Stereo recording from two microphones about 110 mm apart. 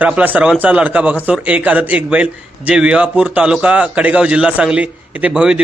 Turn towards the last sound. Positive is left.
turn(degrees=-5)  # may be behind; listen again after turning